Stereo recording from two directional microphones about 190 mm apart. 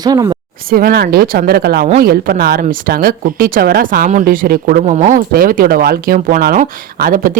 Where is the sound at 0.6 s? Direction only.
50° right (ahead or behind).